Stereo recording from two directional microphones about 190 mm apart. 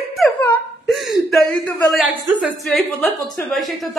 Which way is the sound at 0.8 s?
Centre (ahead or behind).